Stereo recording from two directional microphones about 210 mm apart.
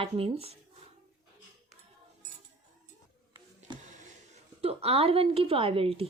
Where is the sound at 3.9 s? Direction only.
35° right (ahead or behind).